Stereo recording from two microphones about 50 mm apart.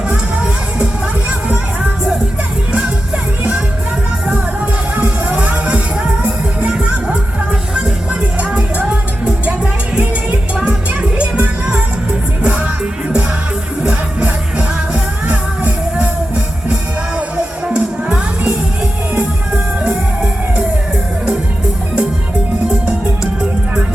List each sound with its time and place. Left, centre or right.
0.1 s music: right
5.4 s music: right
8.5 s music: right
10.6 s music: right
12.4 s music: right
14.9 s music: right
17.7 s music: right
22.7 s music: centre